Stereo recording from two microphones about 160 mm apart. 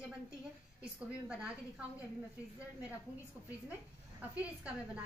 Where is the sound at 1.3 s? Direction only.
5° right (ahead or behind).